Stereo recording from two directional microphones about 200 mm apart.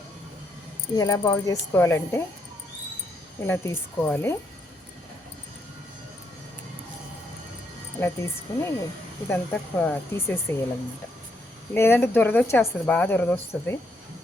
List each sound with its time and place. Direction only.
0.9 s speech: 15° left (ahead or behind)
3.4 s speech: 10° left (ahead or behind)
7.9 s speech: 10° left (ahead or behind)
11.7 s speech: 10° left (ahead or behind)